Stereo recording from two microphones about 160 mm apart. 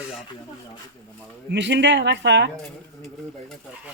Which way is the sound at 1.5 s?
90° right.